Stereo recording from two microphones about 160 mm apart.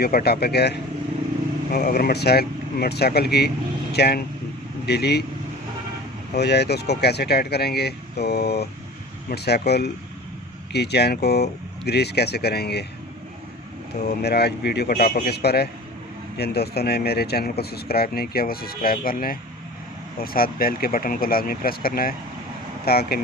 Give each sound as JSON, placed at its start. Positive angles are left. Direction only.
{"t": 0.0, "sound": "speech", "side_deg": 75}
{"t": 1.7, "sound": "speech", "side_deg": 65}
{"t": 6.3, "sound": "speech", "side_deg": 90}
{"t": 14.2, "sound": "speech", "side_deg": 90}